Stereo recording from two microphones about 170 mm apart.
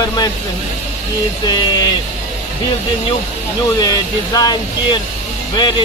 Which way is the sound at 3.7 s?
20° left (ahead or behind).